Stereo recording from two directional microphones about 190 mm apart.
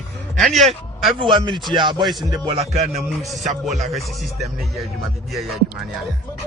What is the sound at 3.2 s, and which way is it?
Speech, centre (ahead or behind).